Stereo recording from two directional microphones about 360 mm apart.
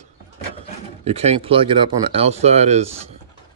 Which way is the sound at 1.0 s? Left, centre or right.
Centre.